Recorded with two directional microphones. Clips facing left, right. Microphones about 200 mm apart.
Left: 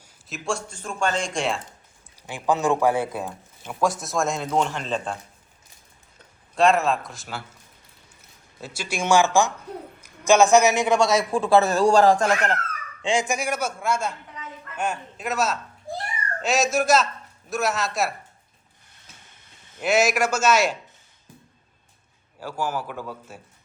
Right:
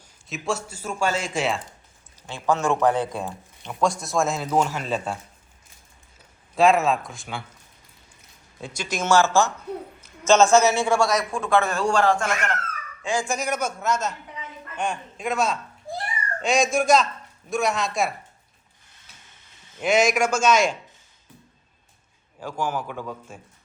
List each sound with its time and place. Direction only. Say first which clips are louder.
0.3 s speech: right 1 dB; centre (ahead or behind)
2.2 s speech: left 1 dB; 15° left (ahead or behind); by 5.1 s 5° right (ahead or behind)
6.6 s speech: right 1 dB; centre (ahead or behind)
8.6 s a man's voice: even; 5° left (ahead or behind); by 12.5 s 35° left (ahead or behind)
13.0 s a man's voice: left 2 dB; 25° left (ahead or behind); by 18.1 s 5° left (ahead or behind)
19.8 s a man's voice: right 1 dB; 5° left (ahead or behind)
22.4 s a man's voice: even; 5° left (ahead or behind)